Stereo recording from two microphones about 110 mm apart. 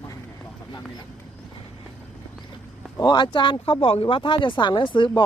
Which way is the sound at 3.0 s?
45° left (ahead or behind).